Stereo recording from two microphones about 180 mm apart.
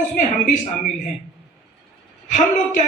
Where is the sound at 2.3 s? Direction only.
45° left (ahead or behind).